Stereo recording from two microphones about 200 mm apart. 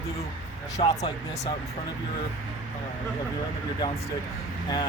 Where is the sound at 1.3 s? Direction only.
35° left (ahead or behind).